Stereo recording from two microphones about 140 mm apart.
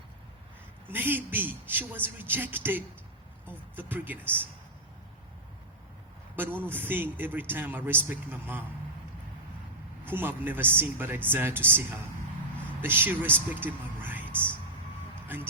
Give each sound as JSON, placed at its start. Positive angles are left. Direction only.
{"t": 0.9, "sound": "a man's voice", "side_deg": -15}
{"t": 6.3, "sound": "a man's voice", "side_deg": -15}
{"t": 10.0, "sound": "a man's voice", "side_deg": -15}
{"t": 12.8, "sound": "a man's voice", "side_deg": -15}